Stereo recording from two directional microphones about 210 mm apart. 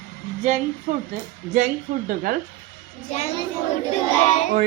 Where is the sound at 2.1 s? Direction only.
45° right (ahead or behind).